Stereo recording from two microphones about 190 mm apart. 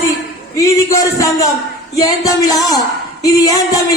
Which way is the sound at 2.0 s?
20° left (ahead or behind).